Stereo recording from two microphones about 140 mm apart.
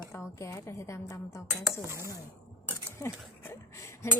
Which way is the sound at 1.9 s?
20° right (ahead or behind).